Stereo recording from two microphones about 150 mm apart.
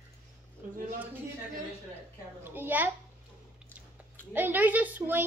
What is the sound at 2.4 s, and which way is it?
Speech, 15° right (ahead or behind).